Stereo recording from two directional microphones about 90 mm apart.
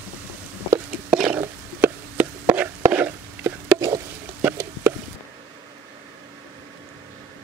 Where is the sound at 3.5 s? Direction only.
40° right (ahead or behind).